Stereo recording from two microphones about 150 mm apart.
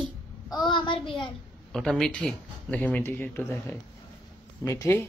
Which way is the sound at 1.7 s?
5° left (ahead or behind).